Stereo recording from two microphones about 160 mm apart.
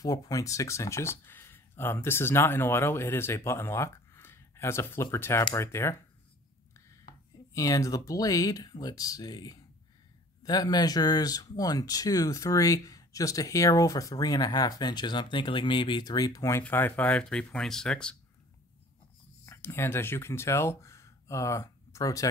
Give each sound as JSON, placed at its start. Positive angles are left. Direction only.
{"t": 0.0, "sound": "speech", "side_deg": 25}
{"t": 7.5, "sound": "speech", "side_deg": 20}
{"t": 19.4, "sound": "speech", "side_deg": 15}